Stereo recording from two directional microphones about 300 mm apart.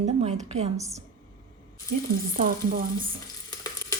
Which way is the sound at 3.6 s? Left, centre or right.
Centre.